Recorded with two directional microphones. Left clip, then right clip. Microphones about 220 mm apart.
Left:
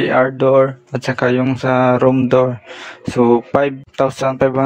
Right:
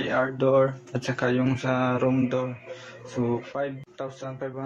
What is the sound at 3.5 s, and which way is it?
Speech, 50° left (ahead or behind).